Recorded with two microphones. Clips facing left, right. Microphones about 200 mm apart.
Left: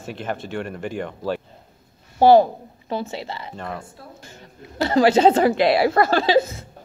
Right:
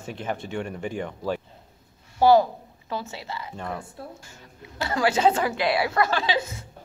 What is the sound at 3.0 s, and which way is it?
Laughter, 30° left (ahead or behind).